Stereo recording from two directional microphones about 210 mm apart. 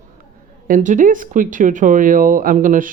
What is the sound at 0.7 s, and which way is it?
Speech, 35° right (ahead or behind).